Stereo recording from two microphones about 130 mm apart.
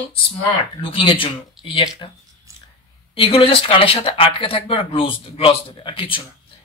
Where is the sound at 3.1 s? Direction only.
45° left (ahead or behind).